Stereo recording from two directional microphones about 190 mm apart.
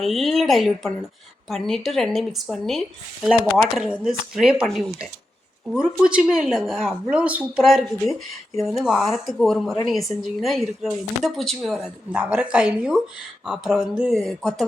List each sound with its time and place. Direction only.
0.0 s speech: centre (ahead or behind)